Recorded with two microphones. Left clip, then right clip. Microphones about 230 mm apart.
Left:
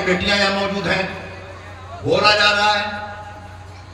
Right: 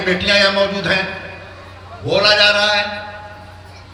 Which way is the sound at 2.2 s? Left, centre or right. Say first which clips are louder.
Right 2 dB; right.